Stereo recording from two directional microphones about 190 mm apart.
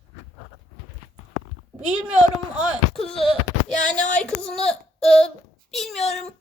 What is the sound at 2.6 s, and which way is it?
Speech, centre (ahead or behind).